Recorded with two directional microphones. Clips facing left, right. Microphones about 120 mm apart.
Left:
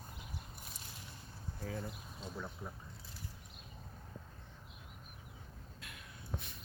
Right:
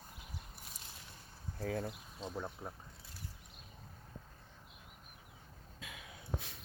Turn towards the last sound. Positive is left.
turn(degrees=-90)